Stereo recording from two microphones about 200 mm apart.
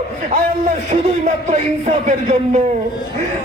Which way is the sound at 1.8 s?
35° right (ahead or behind).